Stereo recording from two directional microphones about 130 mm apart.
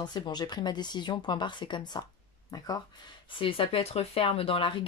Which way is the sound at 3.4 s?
45° left (ahead or behind).